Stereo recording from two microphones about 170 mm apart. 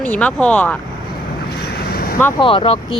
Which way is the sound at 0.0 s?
5° left (ahead or behind).